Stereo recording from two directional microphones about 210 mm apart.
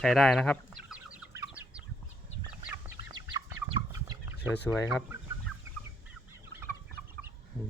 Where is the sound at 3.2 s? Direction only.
20° right (ahead or behind).